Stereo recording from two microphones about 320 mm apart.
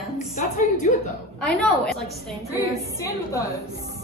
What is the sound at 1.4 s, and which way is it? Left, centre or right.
A woman's voice, centre.